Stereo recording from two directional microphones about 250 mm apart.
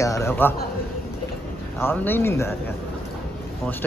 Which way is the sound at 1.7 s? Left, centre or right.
Centre.